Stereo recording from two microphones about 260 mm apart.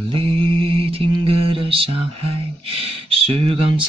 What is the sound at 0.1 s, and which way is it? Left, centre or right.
Mantra, right.